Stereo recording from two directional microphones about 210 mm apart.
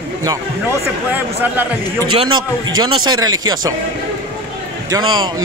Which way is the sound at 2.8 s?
20° right (ahead or behind).